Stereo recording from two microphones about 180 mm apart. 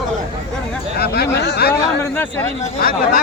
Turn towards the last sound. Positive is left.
turn(degrees=55)  # may be behind; listen again after turning